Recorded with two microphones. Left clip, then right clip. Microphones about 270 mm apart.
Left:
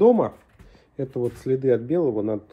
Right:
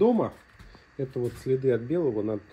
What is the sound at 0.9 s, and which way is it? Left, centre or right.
Speech, left.